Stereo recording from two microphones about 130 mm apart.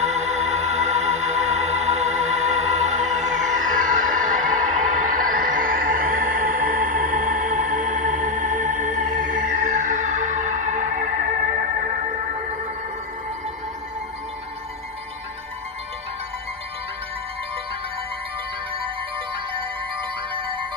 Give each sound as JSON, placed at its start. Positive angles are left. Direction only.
{"t": 0.0, "sound": "music", "side_deg": -60}
{"t": 11.5, "sound": "music", "side_deg": -90}
{"t": 19.3, "sound": "music", "side_deg": -40}